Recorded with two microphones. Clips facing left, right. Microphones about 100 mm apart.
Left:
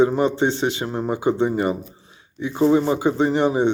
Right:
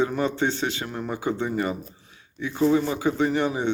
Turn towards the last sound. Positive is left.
turn(degrees=25)  # may be behind; listen again after turning